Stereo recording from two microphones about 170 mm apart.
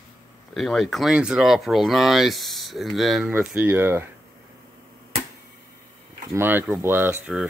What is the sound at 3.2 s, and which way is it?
Speech, 10° right (ahead or behind).